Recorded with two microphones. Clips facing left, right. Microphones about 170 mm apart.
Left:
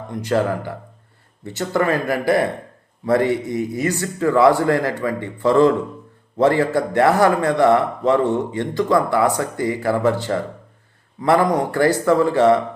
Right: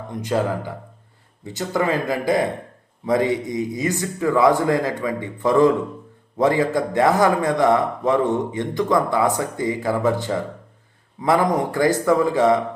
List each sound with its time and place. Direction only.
0.1 s a man's voice: 15° right (ahead or behind)